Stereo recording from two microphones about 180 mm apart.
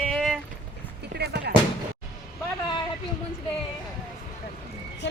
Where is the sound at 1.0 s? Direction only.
65° right (ahead or behind).